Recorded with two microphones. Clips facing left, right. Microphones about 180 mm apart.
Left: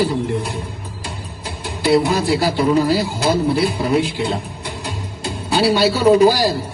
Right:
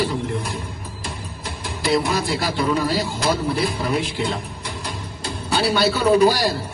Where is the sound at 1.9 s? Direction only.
35° left (ahead or behind).